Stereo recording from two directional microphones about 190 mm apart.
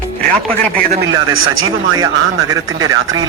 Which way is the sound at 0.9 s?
75° right (ahead or behind).